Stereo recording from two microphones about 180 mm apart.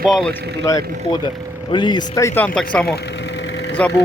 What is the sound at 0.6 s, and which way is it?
Speech, 15° left (ahead or behind).